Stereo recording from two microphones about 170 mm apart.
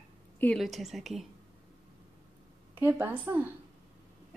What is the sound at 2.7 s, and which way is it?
Speech, 10° right (ahead or behind).